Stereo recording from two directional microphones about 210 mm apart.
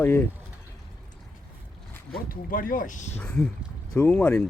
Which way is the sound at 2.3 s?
40° left (ahead or behind).